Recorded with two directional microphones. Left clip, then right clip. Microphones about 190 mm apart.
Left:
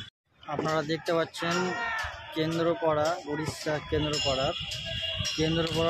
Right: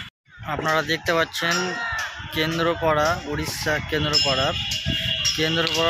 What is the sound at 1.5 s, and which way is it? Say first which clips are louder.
Speech: right 5 dB; 50° right (ahead or behind).